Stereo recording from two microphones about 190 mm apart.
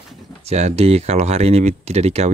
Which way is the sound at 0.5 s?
35° right (ahead or behind).